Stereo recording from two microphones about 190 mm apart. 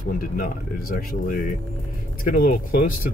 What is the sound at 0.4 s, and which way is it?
Speech, 50° left (ahead or behind).